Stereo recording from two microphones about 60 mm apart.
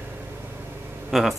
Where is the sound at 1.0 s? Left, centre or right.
Centre.